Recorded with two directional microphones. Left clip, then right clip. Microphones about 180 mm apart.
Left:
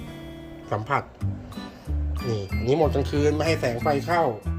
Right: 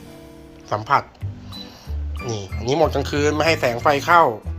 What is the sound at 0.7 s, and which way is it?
Speech, 15° left (ahead or behind).